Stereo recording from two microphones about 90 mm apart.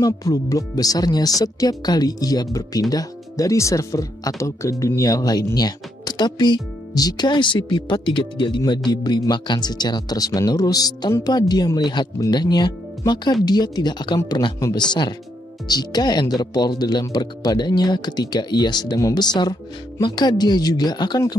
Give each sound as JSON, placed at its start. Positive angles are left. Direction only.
{"t": 0.0, "sound": "speech", "side_deg": 40}